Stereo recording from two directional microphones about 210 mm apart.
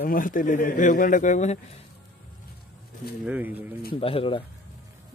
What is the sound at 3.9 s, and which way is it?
Speech, 25° left (ahead or behind).